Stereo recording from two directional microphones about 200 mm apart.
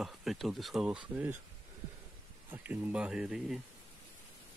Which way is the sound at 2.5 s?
10° right (ahead or behind).